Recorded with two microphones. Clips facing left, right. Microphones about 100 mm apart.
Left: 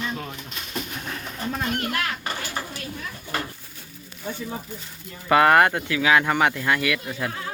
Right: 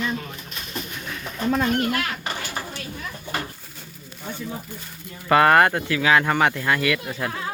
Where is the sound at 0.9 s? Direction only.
40° left (ahead or behind).